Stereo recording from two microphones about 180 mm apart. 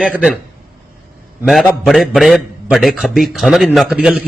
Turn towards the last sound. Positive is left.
turn(degrees=-5)  # may be behind; listen again after turning